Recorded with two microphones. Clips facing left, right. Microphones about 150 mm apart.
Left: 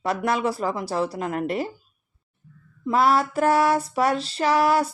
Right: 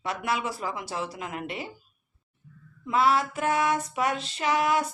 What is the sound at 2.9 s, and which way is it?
Speech, 40° left (ahead or behind).